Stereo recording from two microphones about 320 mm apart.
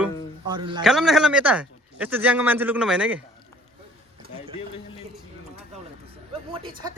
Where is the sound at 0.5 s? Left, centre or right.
Centre.